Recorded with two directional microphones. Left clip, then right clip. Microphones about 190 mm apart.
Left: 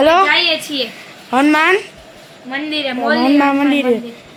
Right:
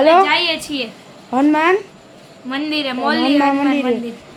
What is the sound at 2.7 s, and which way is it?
Speech, 20° right (ahead or behind).